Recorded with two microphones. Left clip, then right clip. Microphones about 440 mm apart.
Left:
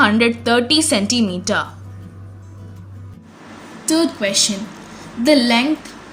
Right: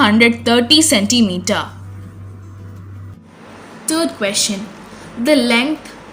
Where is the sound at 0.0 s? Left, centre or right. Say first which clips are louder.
Right 2 dB; left.